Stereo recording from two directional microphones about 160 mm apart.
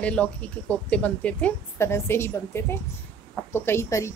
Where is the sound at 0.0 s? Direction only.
10° left (ahead or behind).